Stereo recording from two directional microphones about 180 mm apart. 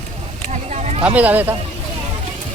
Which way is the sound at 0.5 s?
40° right (ahead or behind).